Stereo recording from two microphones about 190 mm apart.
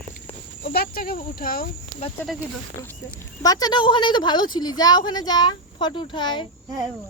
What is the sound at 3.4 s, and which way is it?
A woman's voice, 20° left (ahead or behind).